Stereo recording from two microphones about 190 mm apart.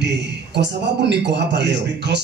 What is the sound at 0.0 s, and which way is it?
Speech, 65° right (ahead or behind).